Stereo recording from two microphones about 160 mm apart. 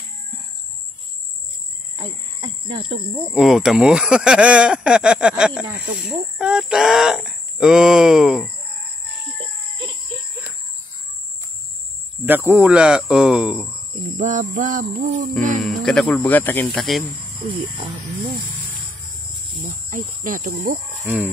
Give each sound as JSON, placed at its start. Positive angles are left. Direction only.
{"t": 2.0, "sound": "a sound", "side_deg": -30}
{"t": 3.3, "sound": "speech", "side_deg": -5}
{"t": 12.3, "sound": "speech", "side_deg": -10}
{"t": 14.1, "sound": "a sound", "side_deg": -50}
{"t": 14.6, "sound": "speech", "side_deg": -55}
{"t": 15.8, "sound": "speech", "side_deg": 5}
{"t": 16.6, "sound": "speech", "side_deg": 0}
{"t": 19.9, "sound": "speech", "side_deg": -55}